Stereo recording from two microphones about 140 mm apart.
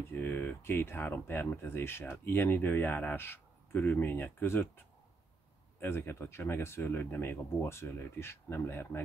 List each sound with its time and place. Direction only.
0.2 s speech: 15° left (ahead or behind)
5.8 s speech: 15° left (ahead or behind)